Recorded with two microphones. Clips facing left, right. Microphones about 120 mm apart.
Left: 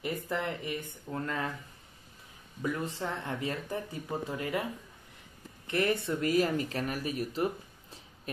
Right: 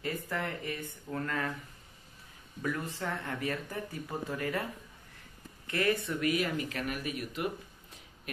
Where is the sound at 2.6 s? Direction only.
20° left (ahead or behind).